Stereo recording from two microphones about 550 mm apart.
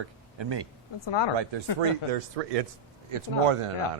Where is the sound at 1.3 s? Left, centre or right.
Right.